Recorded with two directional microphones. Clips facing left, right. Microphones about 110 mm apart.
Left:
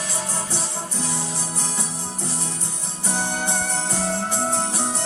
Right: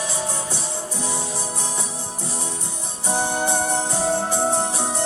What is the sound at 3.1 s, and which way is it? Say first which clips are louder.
Music: right 4 dB; 20° right (ahead or behind).